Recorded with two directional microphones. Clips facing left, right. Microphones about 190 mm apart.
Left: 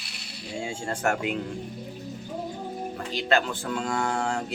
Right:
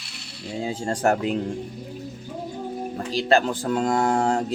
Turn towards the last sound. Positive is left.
turn(degrees=-40)  # may be behind; listen again after turning